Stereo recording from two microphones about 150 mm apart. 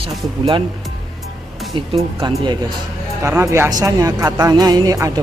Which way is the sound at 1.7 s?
30° right (ahead or behind).